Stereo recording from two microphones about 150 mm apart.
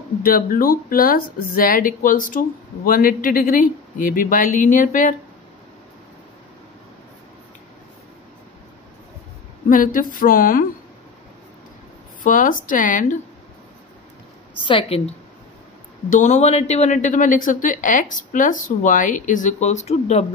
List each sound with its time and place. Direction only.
0.2 s speech: 70° left (ahead or behind)
9.7 s speech: 65° left (ahead or behind)
12.2 s a woman's voice: 65° left (ahead or behind)
14.6 s a woman's voice: 35° left (ahead or behind)
16.1 s a woman's voice: 55° left (ahead or behind)